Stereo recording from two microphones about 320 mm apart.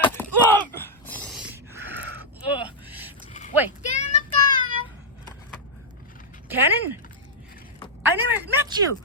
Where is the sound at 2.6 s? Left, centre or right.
Centre.